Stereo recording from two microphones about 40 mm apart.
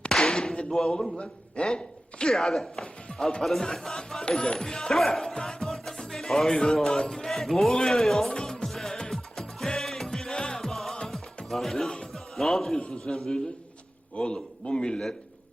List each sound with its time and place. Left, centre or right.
0.2 s a sound: centre
0.7 s speech: centre
1.2 s a man's voice: left
2.3 s speech: centre
7.7 s speech: centre
8.3 s music: centre
11.4 s speech: centre
12.1 s music: centre
12.8 s speech: centre
14.2 s a man's voice: left